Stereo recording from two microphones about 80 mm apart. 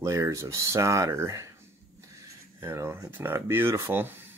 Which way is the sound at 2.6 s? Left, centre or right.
Right.